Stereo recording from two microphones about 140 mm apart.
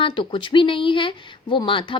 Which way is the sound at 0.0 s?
35° left (ahead or behind).